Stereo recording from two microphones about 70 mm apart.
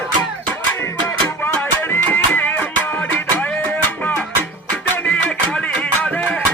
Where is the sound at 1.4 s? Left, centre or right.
Left.